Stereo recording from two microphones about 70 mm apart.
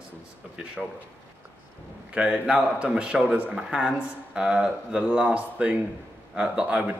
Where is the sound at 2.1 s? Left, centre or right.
Centre.